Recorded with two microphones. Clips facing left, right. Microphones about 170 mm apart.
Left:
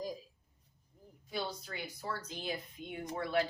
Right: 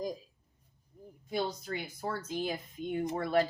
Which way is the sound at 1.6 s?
50° right (ahead or behind).